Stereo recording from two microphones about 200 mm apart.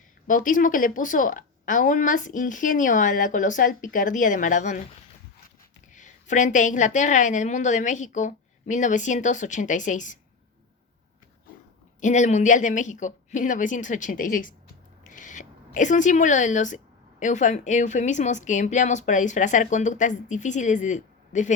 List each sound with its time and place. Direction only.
0.3 s a woman's voice: 40° left (ahead or behind)
5.9 s a woman's voice: 40° left (ahead or behind)
11.9 s a woman's voice: 40° left (ahead or behind)